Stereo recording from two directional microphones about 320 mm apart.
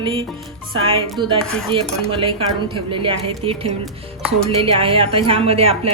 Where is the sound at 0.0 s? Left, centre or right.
Centre.